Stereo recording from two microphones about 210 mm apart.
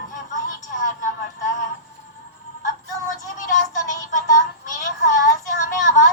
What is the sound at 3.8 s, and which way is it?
Speech, 35° left (ahead or behind).